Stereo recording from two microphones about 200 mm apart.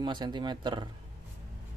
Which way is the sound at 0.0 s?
25° right (ahead or behind).